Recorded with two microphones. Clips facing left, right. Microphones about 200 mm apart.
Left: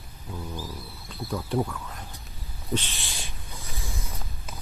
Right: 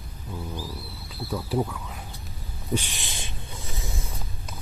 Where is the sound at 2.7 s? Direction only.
15° right (ahead or behind).